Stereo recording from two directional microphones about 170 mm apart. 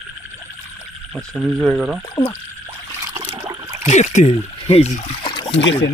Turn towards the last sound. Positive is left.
turn(degrees=90)